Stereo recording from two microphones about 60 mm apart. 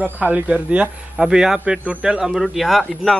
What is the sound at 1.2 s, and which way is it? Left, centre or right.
A man's voice, centre.